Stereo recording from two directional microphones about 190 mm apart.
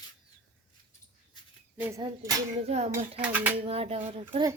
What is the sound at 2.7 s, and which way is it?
Speech, 35° right (ahead or behind).